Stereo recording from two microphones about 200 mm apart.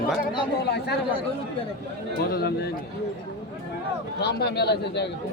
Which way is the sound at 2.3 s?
55° left (ahead or behind).